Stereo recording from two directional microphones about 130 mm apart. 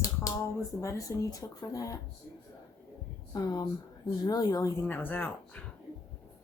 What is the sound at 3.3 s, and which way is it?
Speech, 30° left (ahead or behind).